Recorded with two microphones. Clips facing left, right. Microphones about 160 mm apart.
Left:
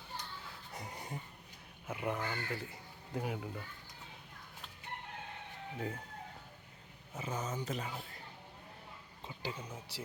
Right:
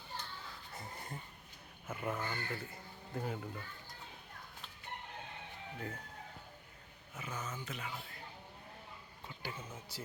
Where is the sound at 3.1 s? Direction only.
5° left (ahead or behind).